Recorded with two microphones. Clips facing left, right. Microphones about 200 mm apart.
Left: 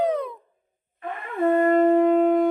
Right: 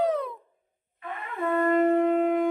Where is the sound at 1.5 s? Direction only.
40° left (ahead or behind).